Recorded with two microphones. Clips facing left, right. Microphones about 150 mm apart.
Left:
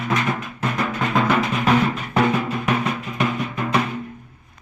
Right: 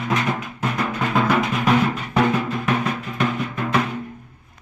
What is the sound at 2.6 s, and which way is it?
Drum, centre (ahead or behind).